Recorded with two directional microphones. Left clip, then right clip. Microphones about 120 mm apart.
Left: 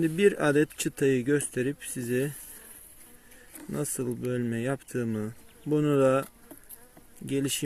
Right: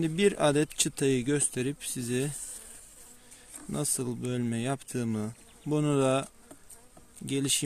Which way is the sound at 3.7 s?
20° right (ahead or behind).